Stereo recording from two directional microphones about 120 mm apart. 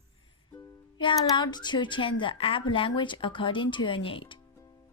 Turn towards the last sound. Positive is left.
turn(degrees=45)  # may be behind; listen again after turning